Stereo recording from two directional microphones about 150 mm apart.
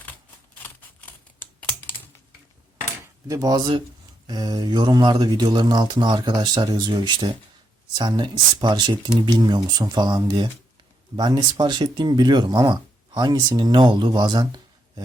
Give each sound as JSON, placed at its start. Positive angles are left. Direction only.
{"t": 0.6, "sound": "scissors", "side_deg": 10}
{"t": 3.2, "sound": "speech", "side_deg": -25}